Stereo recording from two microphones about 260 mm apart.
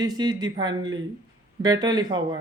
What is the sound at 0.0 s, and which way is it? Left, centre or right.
A man's voice, centre.